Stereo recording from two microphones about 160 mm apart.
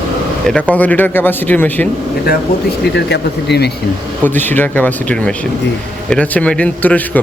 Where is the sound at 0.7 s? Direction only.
10° left (ahead or behind).